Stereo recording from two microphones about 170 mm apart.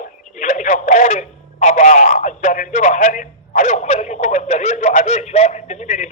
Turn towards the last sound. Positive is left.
turn(degrees=45)  # may be behind; listen again after turning